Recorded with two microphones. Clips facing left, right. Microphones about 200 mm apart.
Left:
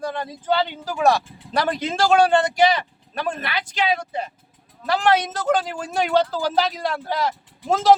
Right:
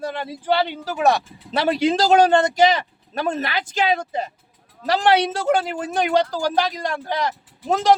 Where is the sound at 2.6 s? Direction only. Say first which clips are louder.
Right 1 dB; 40° right (ahead or behind).